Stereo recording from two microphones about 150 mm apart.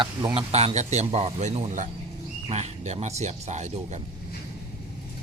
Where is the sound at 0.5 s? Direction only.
45° right (ahead or behind).